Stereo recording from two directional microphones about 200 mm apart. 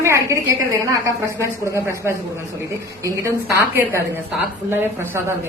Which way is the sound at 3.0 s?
15° right (ahead or behind).